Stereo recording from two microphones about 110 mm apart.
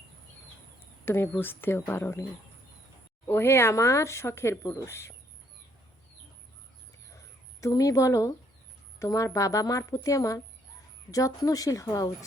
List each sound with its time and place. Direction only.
1.0 s speech: 20° left (ahead or behind)
3.2 s speech: 20° left (ahead or behind)
7.6 s a woman's voice: 30° left (ahead or behind)